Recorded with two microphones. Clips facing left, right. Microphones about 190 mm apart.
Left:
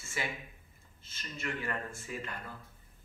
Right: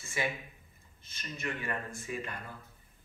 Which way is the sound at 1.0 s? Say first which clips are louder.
Right 1 dB; 20° right (ahead or behind).